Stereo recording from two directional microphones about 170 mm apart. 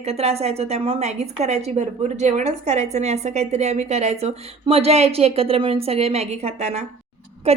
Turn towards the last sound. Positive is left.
turn(degrees=-40)  # may be behind; listen again after turning